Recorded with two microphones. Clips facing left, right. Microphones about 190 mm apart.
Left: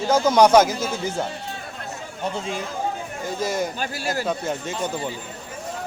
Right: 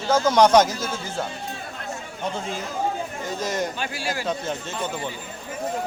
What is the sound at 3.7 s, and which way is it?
Speech, 40° left (ahead or behind).